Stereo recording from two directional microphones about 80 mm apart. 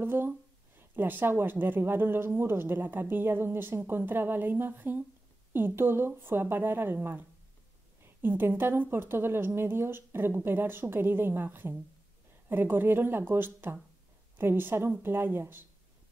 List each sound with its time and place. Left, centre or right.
0.0 s speech: right